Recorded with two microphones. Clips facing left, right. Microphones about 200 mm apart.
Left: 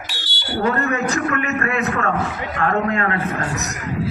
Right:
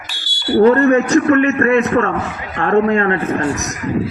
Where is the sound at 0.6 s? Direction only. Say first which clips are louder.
Right 10 dB; 35° right (ahead or behind).